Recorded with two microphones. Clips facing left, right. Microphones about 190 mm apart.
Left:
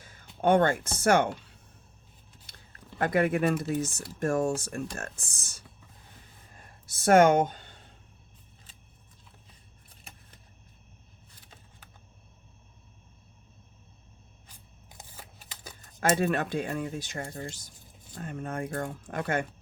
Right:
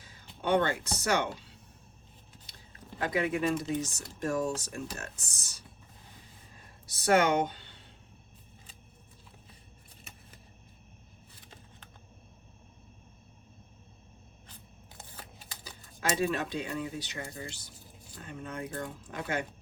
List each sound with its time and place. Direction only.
0.0 s speech: 50° left (ahead or behind)
3.0 s speech: 55° left (ahead or behind)
6.9 s speech: 50° left (ahead or behind)
14.4 s scissors: 10° left (ahead or behind)
15.6 s speech: 50° left (ahead or behind)